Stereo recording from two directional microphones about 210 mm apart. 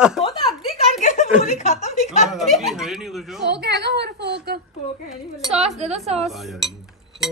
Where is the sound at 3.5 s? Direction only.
50° right (ahead or behind).